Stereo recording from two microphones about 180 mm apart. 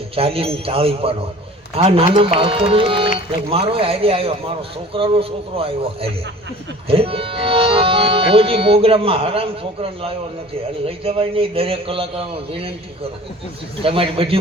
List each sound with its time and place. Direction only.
0.2 s speech: 30° right (ahead or behind)